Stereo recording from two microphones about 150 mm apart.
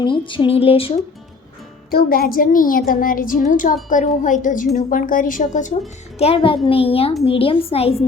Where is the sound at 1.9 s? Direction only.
90° left; by 5.7 s 55° left (ahead or behind).